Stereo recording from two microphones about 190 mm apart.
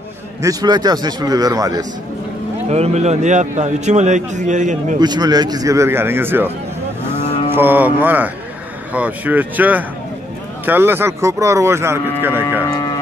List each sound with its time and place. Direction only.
0.4 s a man's voice: 20° right (ahead or behind)
2.7 s a man's voice: 35° right (ahead or behind)
4.9 s speech: 20° right (ahead or behind)
7.5 s speech: 10° right (ahead or behind)
12.6 s a sound: 20° left (ahead or behind)